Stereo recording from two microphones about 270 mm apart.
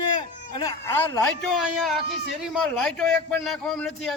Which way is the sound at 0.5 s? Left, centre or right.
Centre.